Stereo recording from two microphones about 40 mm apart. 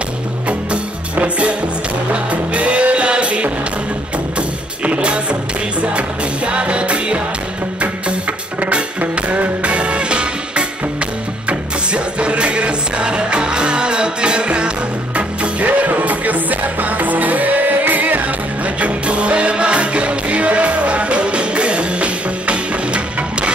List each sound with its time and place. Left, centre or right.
0.5 s music: right
15.1 s music: right
18.8 s music: right